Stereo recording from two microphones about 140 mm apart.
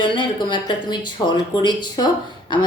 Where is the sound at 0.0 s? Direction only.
35° left (ahead or behind).